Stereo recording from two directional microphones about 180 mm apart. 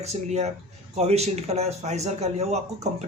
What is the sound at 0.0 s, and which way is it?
Speech, 40° right (ahead or behind).